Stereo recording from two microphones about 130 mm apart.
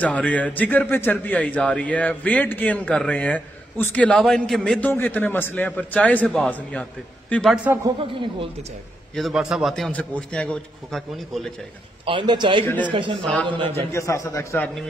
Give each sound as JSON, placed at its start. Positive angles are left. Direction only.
{"t": 0.0, "sound": "a man's voice", "side_deg": 10}
{"t": 7.5, "sound": "a man's voice", "side_deg": -10}
{"t": 9.1, "sound": "a man's voice", "side_deg": 0}
{"t": 12.1, "sound": "a man's voice", "side_deg": -40}
{"t": 13.2, "sound": "a man's voice", "side_deg": 10}
{"t": 13.7, "sound": "a man's voice", "side_deg": 20}